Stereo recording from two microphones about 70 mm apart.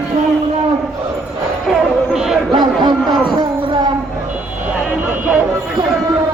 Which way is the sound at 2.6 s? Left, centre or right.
Right.